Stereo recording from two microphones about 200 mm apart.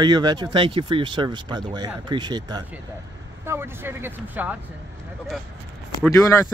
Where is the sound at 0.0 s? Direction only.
20° right (ahead or behind).